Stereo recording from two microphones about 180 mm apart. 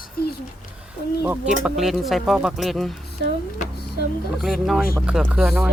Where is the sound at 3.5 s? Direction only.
60° left (ahead or behind).